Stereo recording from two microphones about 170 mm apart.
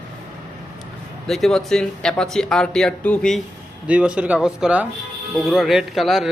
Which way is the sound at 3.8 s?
5° right (ahead or behind).